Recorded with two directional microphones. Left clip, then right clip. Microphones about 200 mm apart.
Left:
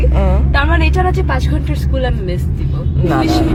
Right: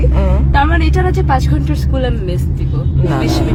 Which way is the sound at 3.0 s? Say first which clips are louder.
Left 3 dB; centre (ahead or behind).